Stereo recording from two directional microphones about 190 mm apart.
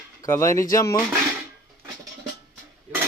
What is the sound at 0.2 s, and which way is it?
Speech, 15° left (ahead or behind).